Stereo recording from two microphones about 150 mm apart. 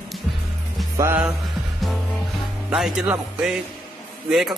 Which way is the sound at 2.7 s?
5° right (ahead or behind).